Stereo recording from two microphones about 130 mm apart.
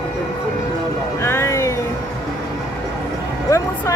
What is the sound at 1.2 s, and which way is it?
Music, 20° left (ahead or behind).